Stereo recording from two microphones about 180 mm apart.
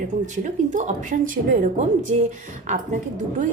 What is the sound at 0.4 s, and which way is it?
A woman's voice, 45° right (ahead or behind).